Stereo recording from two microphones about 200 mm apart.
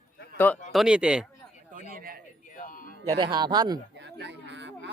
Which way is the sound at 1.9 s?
45° right (ahead or behind).